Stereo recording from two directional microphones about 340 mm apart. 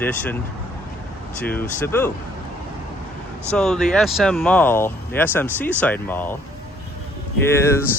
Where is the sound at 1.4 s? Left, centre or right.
Centre.